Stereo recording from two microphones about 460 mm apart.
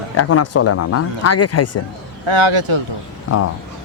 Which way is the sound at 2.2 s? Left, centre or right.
Right.